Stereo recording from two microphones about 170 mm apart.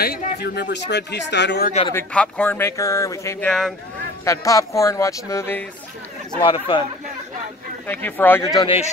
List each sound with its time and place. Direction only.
0.0 s speech: 60° left (ahead or behind); by 1.7 s 85° left
2.1 s speech: 10° left (ahead or behind)
3.4 s speech: 5° left (ahead or behind)
4.2 s speech: 20° left (ahead or behind)
6.3 s speech: 30° left (ahead or behind)
7.8 s speech: 10° left (ahead or behind)
8.5 s speech: 35° left (ahead or behind)